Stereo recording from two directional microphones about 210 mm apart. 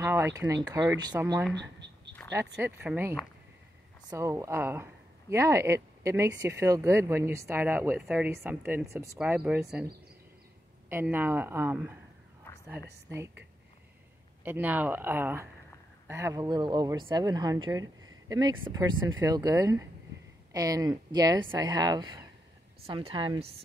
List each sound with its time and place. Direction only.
0.0 s speech: 10° right (ahead or behind)
1.5 s a sound: 55° right (ahead or behind)
2.6 s speech: 10° right (ahead or behind)
10.9 s speech: 10° right (ahead or behind)
14.4 s speech: 10° right (ahead or behind); by 23.6 s 25° right (ahead or behind)